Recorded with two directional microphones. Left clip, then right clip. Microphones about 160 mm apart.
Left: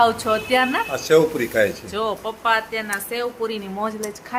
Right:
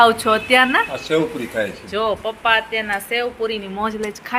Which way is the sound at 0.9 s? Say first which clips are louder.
Left 4 dB; 40° left (ahead or behind).